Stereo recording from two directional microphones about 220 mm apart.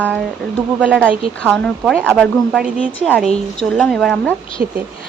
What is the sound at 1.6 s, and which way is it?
Speech, 5° left (ahead or behind).